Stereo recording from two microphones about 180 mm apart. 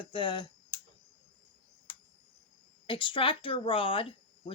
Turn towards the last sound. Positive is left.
turn(degrees=30)  # may be behind; listen again after turning